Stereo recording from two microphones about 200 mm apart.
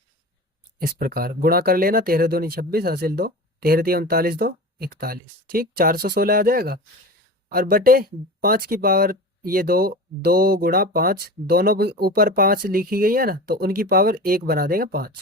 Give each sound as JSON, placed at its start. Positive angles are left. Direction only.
{"t": 0.8, "sound": "speech", "side_deg": -50}